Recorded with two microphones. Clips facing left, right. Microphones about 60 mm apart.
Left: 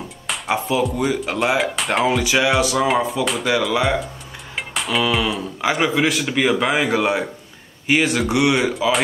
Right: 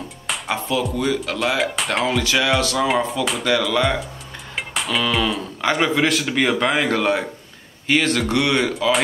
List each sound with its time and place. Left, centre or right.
0.3 s speech: centre
1.6 s speech: centre
2.0 s a man's voice: centre
3.3 s a man's voice: centre